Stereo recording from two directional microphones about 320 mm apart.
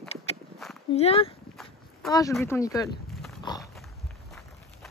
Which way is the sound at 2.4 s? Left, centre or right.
Centre.